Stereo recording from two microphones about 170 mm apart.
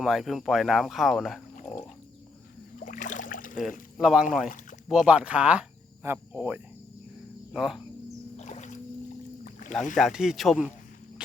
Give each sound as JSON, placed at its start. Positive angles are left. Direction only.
{"t": 0.0, "sound": "speech", "side_deg": 0}
{"t": 2.7, "sound": "a sound", "side_deg": 50}
{"t": 3.9, "sound": "speech", "side_deg": -5}
{"t": 8.4, "sound": "music", "side_deg": 40}
{"t": 9.4, "sound": "rowboat", "side_deg": 45}
{"t": 10.0, "sound": "speech", "side_deg": -5}